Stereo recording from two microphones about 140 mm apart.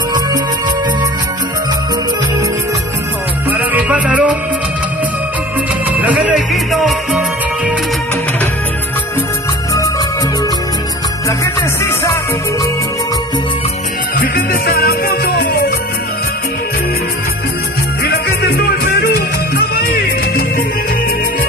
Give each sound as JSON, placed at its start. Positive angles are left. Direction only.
{"t": 3.5, "sound": "music", "side_deg": -10}
{"t": 6.2, "sound": "music", "side_deg": 0}
{"t": 11.8, "sound": "music", "side_deg": 20}
{"t": 14.2, "sound": "music", "side_deg": 90}
{"t": 18.9, "sound": "music", "side_deg": 90}